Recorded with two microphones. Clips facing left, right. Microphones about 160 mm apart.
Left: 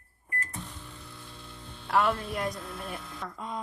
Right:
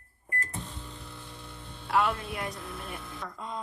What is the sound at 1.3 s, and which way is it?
Mains hum, 20° right (ahead or behind).